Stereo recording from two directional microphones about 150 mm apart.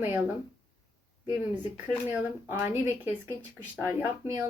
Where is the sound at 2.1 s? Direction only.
15° right (ahead or behind).